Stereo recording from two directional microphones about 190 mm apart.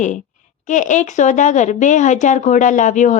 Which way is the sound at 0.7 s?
40° left (ahead or behind).